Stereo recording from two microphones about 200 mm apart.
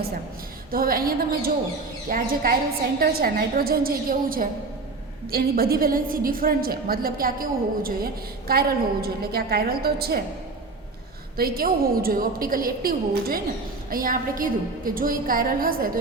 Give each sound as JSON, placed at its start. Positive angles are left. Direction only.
{"t": 0.7, "sound": "a woman's voice", "side_deg": -45}
{"t": 11.3, "sound": "a woman's voice", "side_deg": -50}